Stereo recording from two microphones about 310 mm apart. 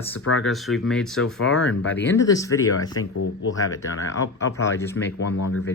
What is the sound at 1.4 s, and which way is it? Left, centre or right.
Speech, left.